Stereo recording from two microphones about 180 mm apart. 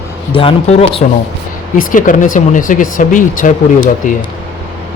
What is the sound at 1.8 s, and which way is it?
Speech, 45° left (ahead or behind).